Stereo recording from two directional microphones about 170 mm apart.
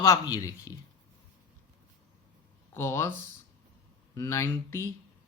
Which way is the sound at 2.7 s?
15° left (ahead or behind).